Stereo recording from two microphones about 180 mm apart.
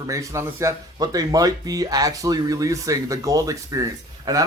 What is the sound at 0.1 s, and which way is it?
Speech, 15° right (ahead or behind).